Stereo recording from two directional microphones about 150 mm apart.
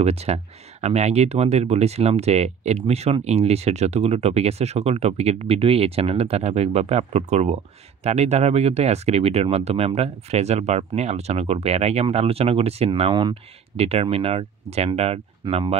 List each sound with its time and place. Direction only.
0.0 s speech: 45° right (ahead or behind)